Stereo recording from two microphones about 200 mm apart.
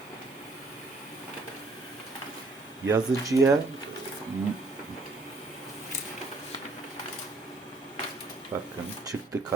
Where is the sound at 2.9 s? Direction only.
15° right (ahead or behind).